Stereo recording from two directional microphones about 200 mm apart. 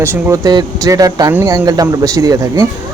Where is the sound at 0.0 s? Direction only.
15° right (ahead or behind).